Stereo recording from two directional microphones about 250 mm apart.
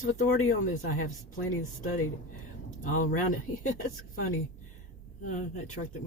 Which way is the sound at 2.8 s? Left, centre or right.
Left.